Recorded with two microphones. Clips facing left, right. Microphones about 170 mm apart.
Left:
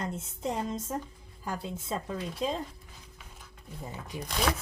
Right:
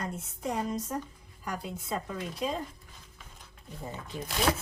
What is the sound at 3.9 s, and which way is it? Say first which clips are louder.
Speech: right 1 dB; 15° left (ahead or behind).